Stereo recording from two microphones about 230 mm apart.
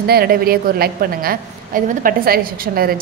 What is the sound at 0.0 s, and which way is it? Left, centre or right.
A woman's voice, right.